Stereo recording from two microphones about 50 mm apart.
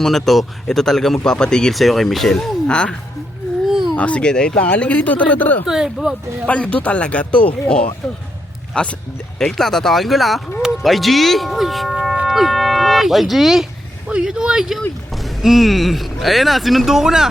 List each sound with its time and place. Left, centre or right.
0.0 s speech: centre
1.7 s speech: centre
2.6 s speech: centre
3.7 s baby cry: centre
3.9 s speech: left
4.3 s speech: centre
4.6 s speech: left
5.6 s speech: centre
6.5 s speech: left
9.5 s speech: centre
12.2 s livestock: centre
14.1 s speech: centre